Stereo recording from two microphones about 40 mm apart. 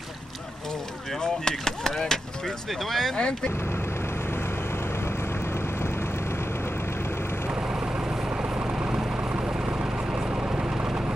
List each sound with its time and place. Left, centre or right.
1.2 s speech: centre
3.2 s speech: left
8.4 s vehicle: right
9.3 s vehicle: right
10.1 s vehicle: centre